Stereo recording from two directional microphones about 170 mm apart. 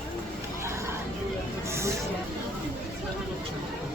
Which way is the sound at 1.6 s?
15° right (ahead or behind).